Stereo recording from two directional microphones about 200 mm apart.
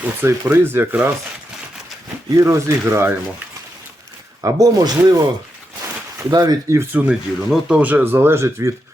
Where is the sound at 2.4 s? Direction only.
15° right (ahead or behind).